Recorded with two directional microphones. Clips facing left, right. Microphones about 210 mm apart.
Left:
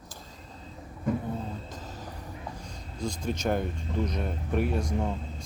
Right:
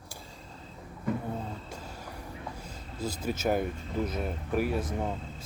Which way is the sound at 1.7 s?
10° right (ahead or behind).